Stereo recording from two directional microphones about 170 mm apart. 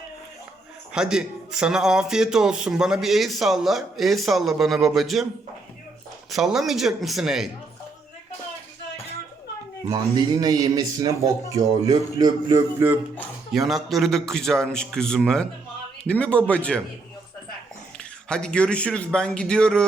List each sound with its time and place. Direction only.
0.9 s a man's voice: 5° right (ahead or behind)
6.3 s a man's voice: centre (ahead or behind)
9.9 s speech: 20° right (ahead or behind)
13.5 s a man's voice: centre (ahead or behind)
18.3 s a man's voice: 5° left (ahead or behind)